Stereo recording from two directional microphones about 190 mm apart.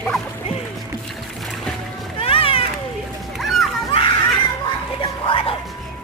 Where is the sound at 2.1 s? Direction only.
30° left (ahead or behind).